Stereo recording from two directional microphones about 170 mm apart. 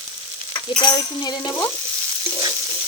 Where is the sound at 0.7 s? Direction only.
25° left (ahead or behind).